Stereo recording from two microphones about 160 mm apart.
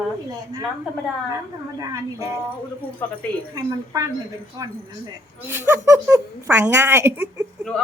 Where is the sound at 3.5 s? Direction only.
20° right (ahead or behind).